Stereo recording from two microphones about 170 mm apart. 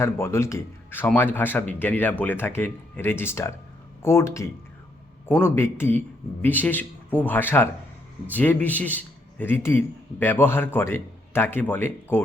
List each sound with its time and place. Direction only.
0.0 s a man's voice: 15° left (ahead or behind)